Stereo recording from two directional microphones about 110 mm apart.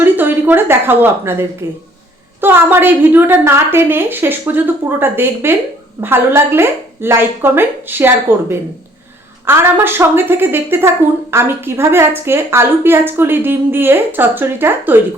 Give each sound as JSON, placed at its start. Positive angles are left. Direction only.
{"t": 0.0, "sound": "a woman's voice", "side_deg": -15}